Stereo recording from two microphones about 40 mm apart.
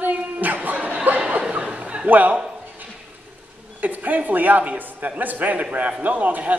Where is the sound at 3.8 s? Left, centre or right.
Right.